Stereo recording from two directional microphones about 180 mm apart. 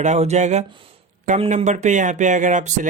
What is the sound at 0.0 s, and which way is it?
Speech, 40° right (ahead or behind).